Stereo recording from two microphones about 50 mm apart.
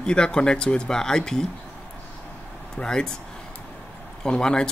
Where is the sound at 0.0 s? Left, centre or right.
Centre.